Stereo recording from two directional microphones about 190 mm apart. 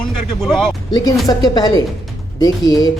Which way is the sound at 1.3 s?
20° left (ahead or behind).